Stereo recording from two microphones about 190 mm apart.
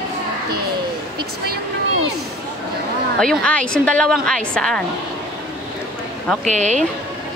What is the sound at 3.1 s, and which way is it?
A woman's voice, 5° left (ahead or behind).